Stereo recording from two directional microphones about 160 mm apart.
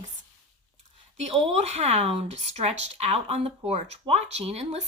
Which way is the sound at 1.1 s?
40° right (ahead or behind).